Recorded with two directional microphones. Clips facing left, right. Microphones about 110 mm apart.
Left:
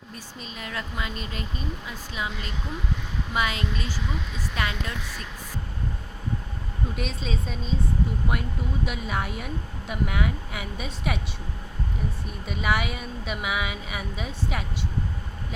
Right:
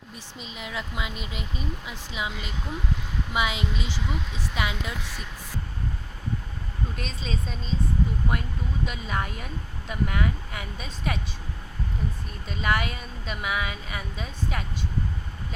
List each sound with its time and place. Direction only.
0.3 s speech: 15° right (ahead or behind)
6.9 s a woman's voice: 5° left (ahead or behind)
12.5 s a woman's voice: 5° left (ahead or behind)